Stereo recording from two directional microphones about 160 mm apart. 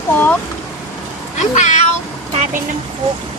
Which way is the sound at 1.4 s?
50° left (ahead or behind).